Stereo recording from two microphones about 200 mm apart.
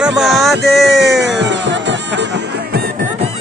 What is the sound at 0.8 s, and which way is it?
Music, 60° right (ahead or behind).